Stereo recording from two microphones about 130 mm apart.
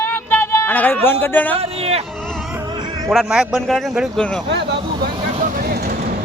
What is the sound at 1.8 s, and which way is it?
Speech, 50° right (ahead or behind).